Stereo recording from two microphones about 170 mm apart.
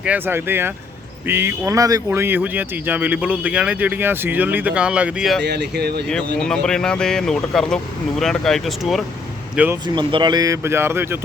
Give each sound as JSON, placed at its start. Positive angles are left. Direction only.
{"t": 0.0, "sound": "speech", "side_deg": -10}
{"t": 5.4, "sound": "speech", "side_deg": -80}
{"t": 6.1, "sound": "speech", "side_deg": 5}
{"t": 9.8, "sound": "speech", "side_deg": -25}